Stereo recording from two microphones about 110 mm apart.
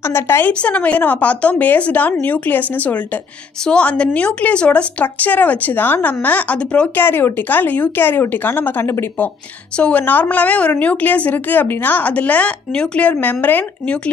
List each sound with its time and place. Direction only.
0.1 s a woman's voice: 20° left (ahead or behind)
0.5 s a woman's voice: 10° left (ahead or behind)